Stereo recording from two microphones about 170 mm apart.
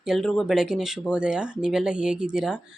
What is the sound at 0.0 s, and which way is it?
A woman's voice, centre (ahead or behind).